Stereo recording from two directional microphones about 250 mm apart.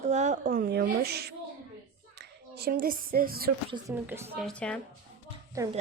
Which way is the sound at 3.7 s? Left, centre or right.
Centre.